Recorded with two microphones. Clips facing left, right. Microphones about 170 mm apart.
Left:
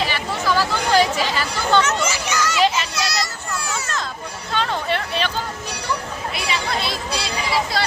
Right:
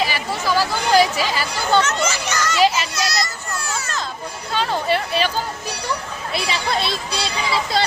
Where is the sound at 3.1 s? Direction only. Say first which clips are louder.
Right 1 dB; 10° left (ahead or behind).